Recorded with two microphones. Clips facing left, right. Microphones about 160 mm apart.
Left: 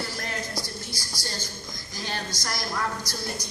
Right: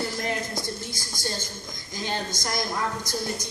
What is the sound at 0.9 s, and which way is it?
A woman's voice, 25° right (ahead or behind).